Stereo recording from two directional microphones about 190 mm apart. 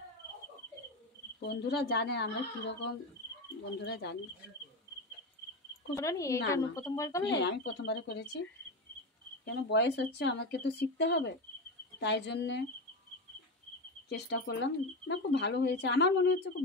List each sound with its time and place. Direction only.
1.4 s speech: 60° left (ahead or behind)
5.9 s speech: 15° left (ahead or behind)
7.3 s speech: 65° left (ahead or behind)
14.0 s speech: 60° left (ahead or behind)